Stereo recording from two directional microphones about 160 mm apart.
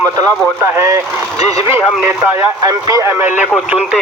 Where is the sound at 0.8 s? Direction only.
20° right (ahead or behind).